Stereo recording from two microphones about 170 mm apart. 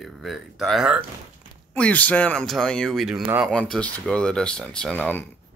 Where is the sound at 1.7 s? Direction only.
10° left (ahead or behind).